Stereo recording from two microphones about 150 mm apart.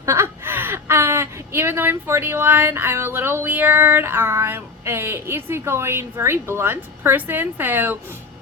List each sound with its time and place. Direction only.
0.0 s speech: 20° right (ahead or behind)